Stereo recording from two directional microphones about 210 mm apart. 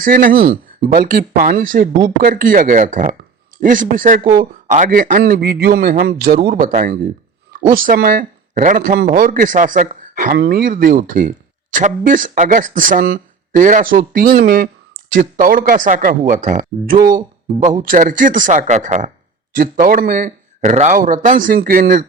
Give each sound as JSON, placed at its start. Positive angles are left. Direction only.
{"t": 0.0, "sound": "speech", "side_deg": -40}
{"t": 4.2, "sound": "speech", "side_deg": -20}
{"t": 4.7, "sound": "a man's voice", "side_deg": -40}